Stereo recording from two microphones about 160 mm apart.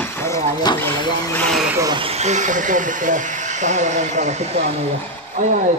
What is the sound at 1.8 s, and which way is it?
Speech, 25° right (ahead or behind).